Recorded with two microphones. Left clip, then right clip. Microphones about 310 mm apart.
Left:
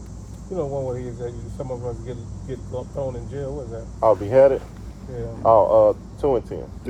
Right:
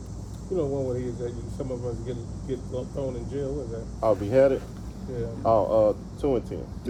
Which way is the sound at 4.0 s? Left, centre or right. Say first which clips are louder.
Left 6 dB; centre.